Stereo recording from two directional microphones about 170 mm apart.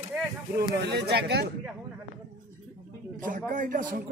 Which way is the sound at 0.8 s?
75° right (ahead or behind).